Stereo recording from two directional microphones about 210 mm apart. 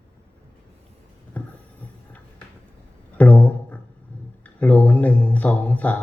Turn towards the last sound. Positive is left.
turn(degrees=5)  # may be behind; listen again after turning